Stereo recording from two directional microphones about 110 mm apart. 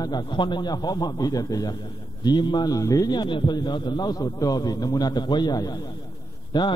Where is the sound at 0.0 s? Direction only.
40° left (ahead or behind).